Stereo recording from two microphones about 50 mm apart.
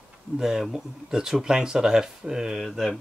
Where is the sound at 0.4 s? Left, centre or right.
Centre.